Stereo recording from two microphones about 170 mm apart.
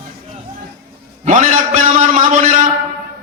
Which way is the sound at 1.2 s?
50° right (ahead or behind).